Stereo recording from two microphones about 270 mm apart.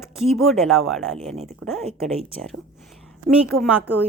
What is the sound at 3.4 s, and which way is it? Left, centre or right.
Speech, centre.